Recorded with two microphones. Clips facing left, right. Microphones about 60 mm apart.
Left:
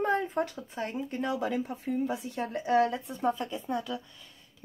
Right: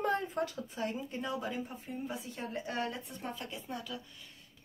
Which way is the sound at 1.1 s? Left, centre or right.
Left.